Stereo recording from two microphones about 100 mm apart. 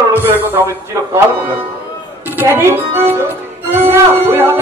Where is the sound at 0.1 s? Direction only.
20° right (ahead or behind).